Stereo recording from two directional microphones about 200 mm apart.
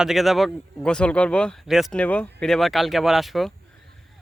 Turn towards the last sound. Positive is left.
turn(degrees=0)  # may be behind; listen again after turning